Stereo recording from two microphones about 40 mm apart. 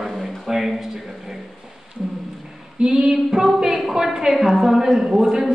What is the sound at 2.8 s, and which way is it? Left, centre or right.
Female singing, right.